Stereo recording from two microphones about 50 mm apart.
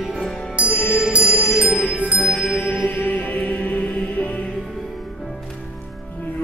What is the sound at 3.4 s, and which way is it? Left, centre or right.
Music, left.